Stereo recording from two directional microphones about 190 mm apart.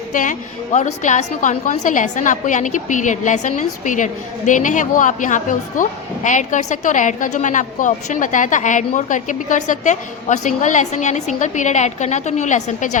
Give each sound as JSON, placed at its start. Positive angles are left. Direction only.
{"t": 0.1, "sound": "a woman's voice", "side_deg": 45}